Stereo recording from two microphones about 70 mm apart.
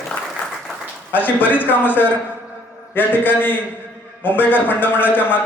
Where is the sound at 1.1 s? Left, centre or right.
Left.